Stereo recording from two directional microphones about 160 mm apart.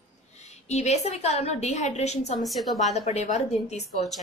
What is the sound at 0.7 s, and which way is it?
Speech, 45° left (ahead or behind).